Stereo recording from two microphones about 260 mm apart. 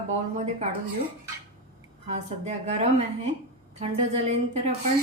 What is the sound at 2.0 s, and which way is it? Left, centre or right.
Speech, right.